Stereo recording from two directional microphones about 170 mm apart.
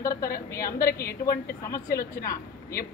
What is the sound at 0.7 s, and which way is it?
Speech, 65° left (ahead or behind).